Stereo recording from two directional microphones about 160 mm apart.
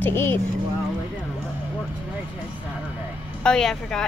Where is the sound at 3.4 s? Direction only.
5° left (ahead or behind).